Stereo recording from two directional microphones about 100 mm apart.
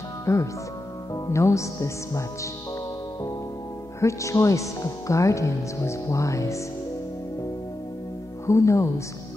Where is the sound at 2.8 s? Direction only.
35° left (ahead or behind).